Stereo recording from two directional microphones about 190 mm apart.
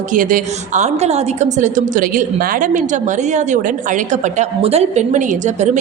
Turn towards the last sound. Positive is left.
turn(degrees=-40)  # may be behind; listen again after turning